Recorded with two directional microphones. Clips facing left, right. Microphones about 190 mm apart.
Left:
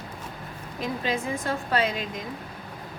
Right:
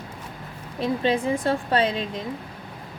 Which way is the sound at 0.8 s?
30° right (ahead or behind).